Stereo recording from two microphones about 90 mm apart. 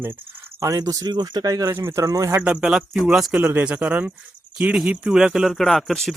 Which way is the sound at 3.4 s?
20° right (ahead or behind).